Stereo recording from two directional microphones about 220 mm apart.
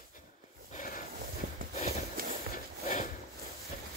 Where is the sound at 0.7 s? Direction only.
40° left (ahead or behind).